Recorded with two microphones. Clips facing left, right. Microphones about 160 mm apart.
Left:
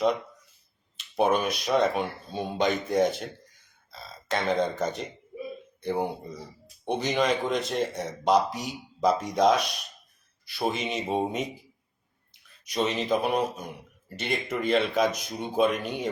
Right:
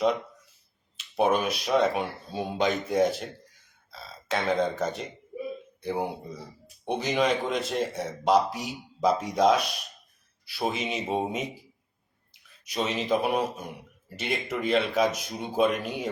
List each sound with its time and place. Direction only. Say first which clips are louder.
0.9 s a man's voice: even; 5° right (ahead or behind)